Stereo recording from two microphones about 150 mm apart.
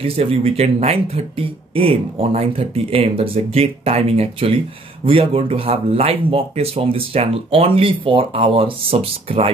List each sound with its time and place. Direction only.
0.0 s speech: 40° right (ahead or behind)